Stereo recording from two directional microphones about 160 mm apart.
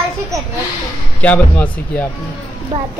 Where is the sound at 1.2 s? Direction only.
10° left (ahead or behind).